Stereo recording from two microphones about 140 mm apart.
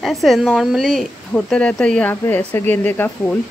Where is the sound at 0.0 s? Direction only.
Centre (ahead or behind).